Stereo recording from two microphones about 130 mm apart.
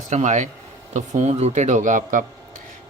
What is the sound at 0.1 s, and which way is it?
Speech, 65° right (ahead or behind).